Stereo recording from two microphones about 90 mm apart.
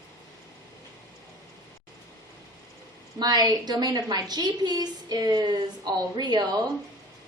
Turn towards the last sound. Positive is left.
turn(degrees=-50)  # may be behind; listen again after turning